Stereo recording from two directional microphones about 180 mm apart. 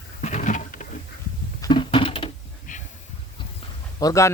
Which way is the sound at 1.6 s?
25° left (ahead or behind).